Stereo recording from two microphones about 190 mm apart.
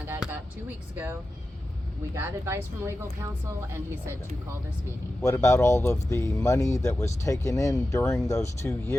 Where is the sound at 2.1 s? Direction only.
15° right (ahead or behind).